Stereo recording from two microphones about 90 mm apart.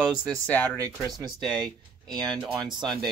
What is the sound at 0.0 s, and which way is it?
Speech, 10° right (ahead or behind).